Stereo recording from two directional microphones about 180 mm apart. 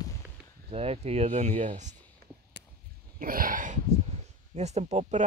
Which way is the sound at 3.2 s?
50° right (ahead or behind).